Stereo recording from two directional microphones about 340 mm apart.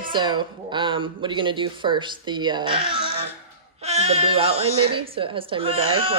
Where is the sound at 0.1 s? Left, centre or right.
Centre.